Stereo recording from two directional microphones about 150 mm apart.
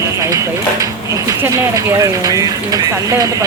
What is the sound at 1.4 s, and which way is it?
Speech, 20° right (ahead or behind).